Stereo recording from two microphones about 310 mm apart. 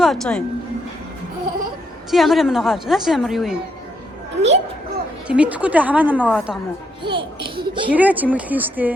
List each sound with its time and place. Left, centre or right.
0.0 s a woman's voice: centre
2.0 s a woman's voice: centre
4.4 s a child's voice: right
5.3 s a woman's voice: centre
7.0 s a woman's voice: centre
7.9 s a woman's voice: centre